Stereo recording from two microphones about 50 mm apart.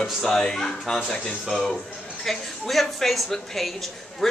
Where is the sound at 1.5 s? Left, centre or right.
Centre.